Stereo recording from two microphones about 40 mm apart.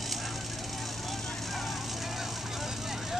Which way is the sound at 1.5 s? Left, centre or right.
Centre.